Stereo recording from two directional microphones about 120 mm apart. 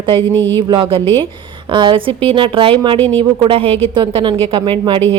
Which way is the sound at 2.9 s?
15° left (ahead or behind).